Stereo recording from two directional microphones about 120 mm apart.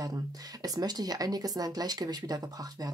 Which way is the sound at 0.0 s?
30° right (ahead or behind).